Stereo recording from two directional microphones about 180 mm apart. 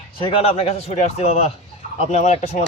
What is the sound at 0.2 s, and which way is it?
A man's voice, 30° left (ahead or behind).